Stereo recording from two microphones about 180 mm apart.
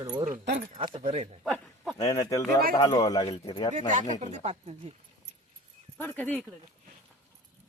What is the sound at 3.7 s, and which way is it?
Speech, 45° right (ahead or behind).